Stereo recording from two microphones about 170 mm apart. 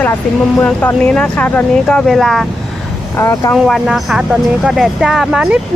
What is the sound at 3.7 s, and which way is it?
Speech, centre (ahead or behind).